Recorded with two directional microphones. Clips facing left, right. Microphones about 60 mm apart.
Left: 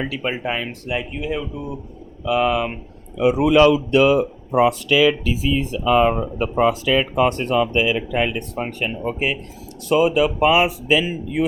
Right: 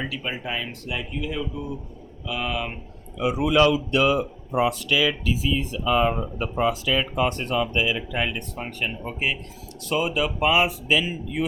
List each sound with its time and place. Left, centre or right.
0.1 s speech: left
0.7 s speech: left
2.2 s speech: left
5.5 s speech: left
7.3 s speech: left
7.5 s speech: left